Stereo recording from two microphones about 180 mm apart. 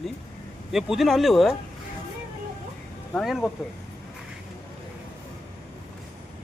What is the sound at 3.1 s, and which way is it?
Speech, centre (ahead or behind).